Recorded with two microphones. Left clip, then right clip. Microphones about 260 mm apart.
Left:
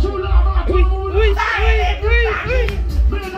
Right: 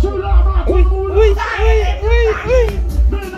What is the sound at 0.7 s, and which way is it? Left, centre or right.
Music, centre.